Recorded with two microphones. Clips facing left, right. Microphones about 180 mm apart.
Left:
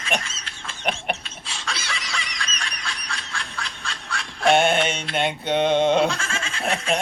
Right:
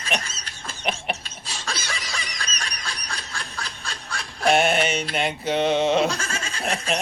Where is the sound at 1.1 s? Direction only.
40° right (ahead or behind).